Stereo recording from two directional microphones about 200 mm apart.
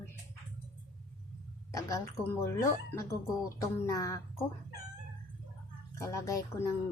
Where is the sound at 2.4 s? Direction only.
15° left (ahead or behind).